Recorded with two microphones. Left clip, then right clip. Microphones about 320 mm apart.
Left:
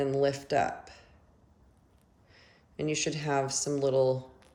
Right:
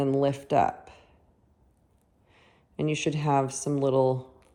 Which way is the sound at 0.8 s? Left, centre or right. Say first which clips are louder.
Even; centre.